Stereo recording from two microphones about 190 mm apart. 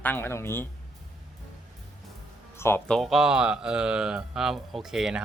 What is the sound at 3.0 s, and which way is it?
Speech, centre (ahead or behind).